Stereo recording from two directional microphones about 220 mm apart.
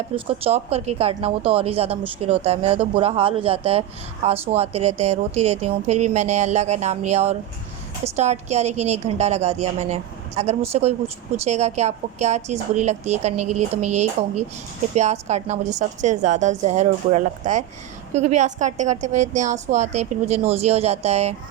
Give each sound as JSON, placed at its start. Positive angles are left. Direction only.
{"t": 0.3, "sound": "a woman's voice", "side_deg": -25}